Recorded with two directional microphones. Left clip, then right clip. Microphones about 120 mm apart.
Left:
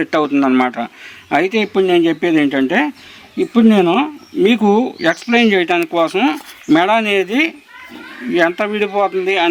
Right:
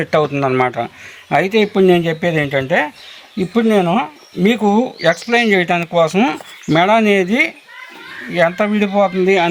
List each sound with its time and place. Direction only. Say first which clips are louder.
0.0 s speech: even; 50° left (ahead or behind)